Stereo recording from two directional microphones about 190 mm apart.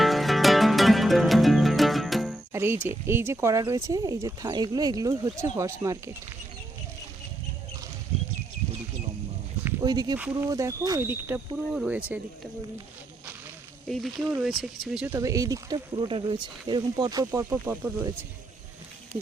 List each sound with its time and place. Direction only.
0.0 s music: centre (ahead or behind)
2.5 s speech: 15° right (ahead or behind)
9.8 s speech: 20° right (ahead or behind)
10.2 s speech: 10° right (ahead or behind)
13.8 s speech: centre (ahead or behind)